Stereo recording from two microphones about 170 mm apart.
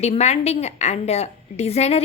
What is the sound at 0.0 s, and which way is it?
A woman's voice, 40° left (ahead or behind).